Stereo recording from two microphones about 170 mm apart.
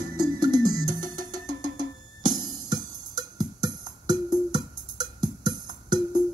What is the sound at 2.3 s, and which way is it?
Music, 25° right (ahead or behind).